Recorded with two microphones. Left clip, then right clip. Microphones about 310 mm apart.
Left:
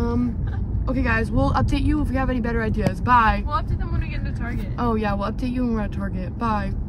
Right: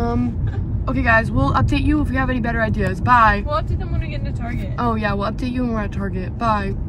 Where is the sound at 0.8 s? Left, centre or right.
Centre.